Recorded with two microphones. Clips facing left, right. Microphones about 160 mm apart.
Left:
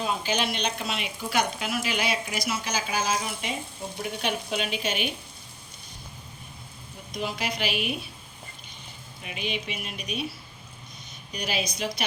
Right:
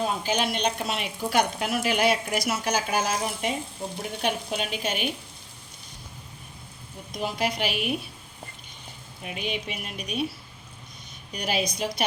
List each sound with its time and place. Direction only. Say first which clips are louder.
0.0 s speech: right 2 dB; 45° right (ahead or behind)
7.2 s speech: right 3 dB; 45° right (ahead or behind)
9.2 s speech: right 1 dB; 45° right (ahead or behind)
11.3 s speech: right 3 dB; 50° right (ahead or behind)